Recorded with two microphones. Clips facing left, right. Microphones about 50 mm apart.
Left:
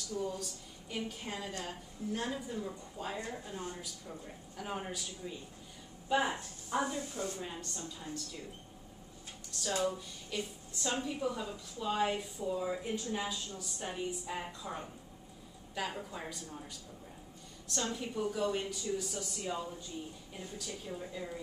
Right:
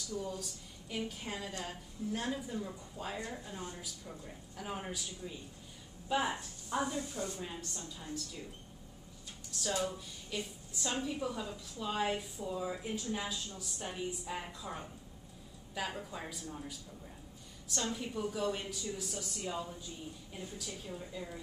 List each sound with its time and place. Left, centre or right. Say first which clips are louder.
0.1 s a woman's voice: left 3 dB; centre
6.9 s a woman's voice: even; left
7.3 s a woman's voice: left 1 dB; centre
9.5 s a woman's voice: left 2 dB; centre
17.8 s a woman's voice: left 1 dB; centre